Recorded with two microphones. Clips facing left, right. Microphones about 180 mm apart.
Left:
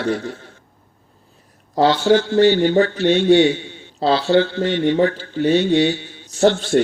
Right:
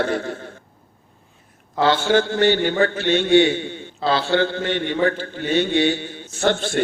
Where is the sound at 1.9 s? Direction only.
55° right (ahead or behind).